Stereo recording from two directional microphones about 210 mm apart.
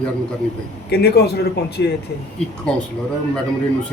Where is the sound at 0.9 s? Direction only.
50° left (ahead or behind).